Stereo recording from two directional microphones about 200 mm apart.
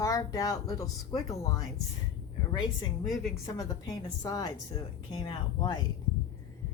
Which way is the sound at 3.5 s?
20° left (ahead or behind).